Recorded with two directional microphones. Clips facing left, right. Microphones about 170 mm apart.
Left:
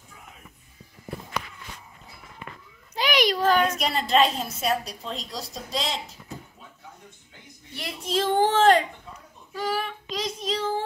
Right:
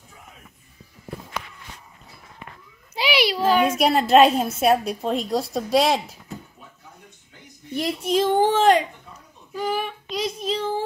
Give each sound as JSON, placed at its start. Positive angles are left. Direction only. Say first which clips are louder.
{"t": 2.9, "sound": "a sound", "louder": "right 1 dB", "side_deg": -10}
{"t": 3.8, "sound": "a woman's voice", "louder": "right 7 dB", "side_deg": -60}
{"t": 8.1, "sound": "speech", "louder": "right 3 dB", "side_deg": -10}
{"t": 9.5, "sound": "child singing", "louder": "right 3 dB", "side_deg": -10}